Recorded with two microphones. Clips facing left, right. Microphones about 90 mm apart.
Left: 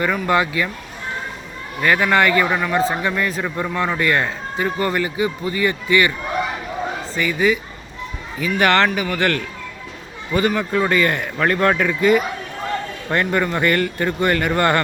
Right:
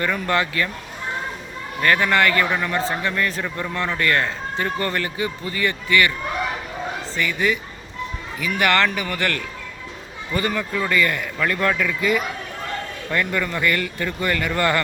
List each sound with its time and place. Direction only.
0.0 s speech: 15° left (ahead or behind)
1.8 s speech: 15° left (ahead or behind)
7.2 s speech: 15° left (ahead or behind)
8.5 s speech: 25° left (ahead or behind)
11.4 s speech: 35° left (ahead or behind)